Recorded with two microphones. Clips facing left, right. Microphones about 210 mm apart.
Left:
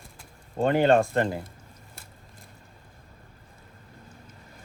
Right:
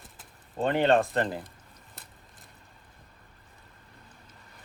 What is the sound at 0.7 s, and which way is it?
Speech, centre (ahead or behind).